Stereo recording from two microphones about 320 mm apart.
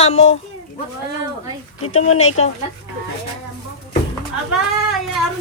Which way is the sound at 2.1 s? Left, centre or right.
Left.